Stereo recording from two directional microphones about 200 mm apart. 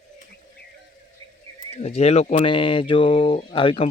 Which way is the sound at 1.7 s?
30° left (ahead or behind).